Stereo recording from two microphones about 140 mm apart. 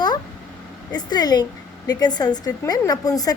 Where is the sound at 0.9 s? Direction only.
30° left (ahead or behind).